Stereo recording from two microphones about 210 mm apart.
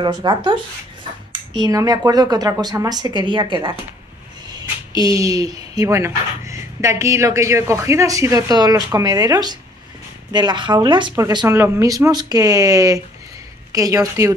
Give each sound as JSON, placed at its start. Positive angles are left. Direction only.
{"t": 0.0, "sound": "a woman's voice", "side_deg": -20}
{"t": 1.6, "sound": "a woman's voice", "side_deg": -15}